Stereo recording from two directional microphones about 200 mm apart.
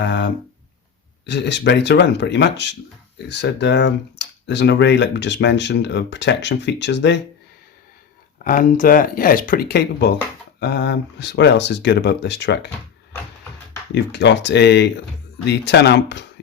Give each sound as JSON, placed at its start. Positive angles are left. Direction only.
{"t": 0.0, "sound": "speech", "side_deg": 60}
{"t": 1.3, "sound": "speech", "side_deg": 60}
{"t": 8.4, "sound": "speech", "side_deg": 45}
{"t": 13.9, "sound": "speech", "side_deg": 60}